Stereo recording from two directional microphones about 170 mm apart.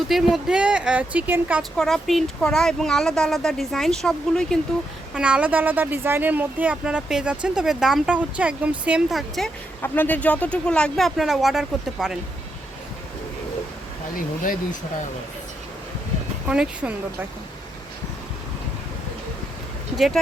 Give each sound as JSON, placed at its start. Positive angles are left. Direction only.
{"t": 0.1, "sound": "speech", "side_deg": 0}
{"t": 1.7, "sound": "speech", "side_deg": 0}
{"t": 9.8, "sound": "speech", "side_deg": 10}
{"t": 16.5, "sound": "speech", "side_deg": -5}